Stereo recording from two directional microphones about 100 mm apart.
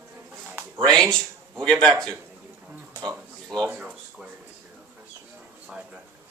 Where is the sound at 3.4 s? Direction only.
5° left (ahead or behind).